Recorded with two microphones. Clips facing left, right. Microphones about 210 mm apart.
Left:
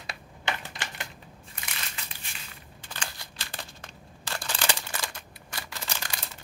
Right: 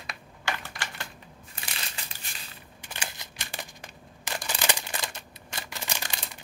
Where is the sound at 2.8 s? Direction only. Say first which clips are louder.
Even; 15° right (ahead or behind).